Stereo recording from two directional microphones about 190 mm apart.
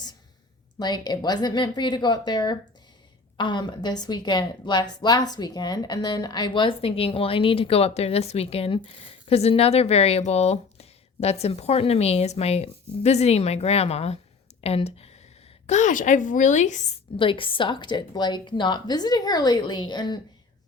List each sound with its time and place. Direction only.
0.8 s a woman's voice: 20° left (ahead or behind)
14.6 s a sound: 30° left (ahead or behind)
15.6 s speech: 40° left (ahead or behind)
17.2 s a woman's voice: 25° left (ahead or behind)